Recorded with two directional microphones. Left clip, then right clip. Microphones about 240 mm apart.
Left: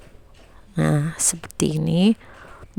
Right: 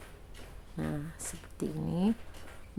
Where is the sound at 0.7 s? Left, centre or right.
Left.